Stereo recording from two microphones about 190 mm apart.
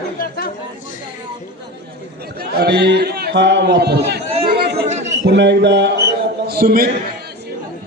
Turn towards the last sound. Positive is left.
turn(degrees=-50)  # may be behind; listen again after turning